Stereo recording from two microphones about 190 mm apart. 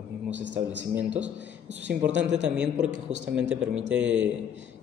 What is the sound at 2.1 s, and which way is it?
Speech, 70° right (ahead or behind).